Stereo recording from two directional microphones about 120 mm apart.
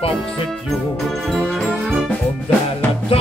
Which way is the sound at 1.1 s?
Centre (ahead or behind).